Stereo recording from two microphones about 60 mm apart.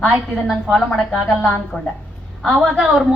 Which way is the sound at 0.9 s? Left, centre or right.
Centre.